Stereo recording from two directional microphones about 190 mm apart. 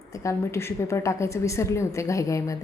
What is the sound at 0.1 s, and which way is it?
A woman's voice, 15° left (ahead or behind).